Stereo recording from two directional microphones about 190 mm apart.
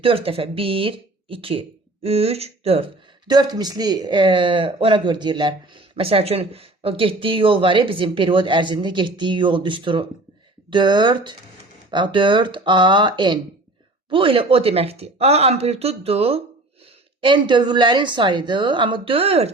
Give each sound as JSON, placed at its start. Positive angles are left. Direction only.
{"t": 0.0, "sound": "speech", "side_deg": -30}